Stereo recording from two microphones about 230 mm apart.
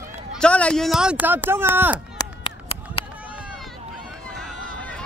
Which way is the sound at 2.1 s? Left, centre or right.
Left.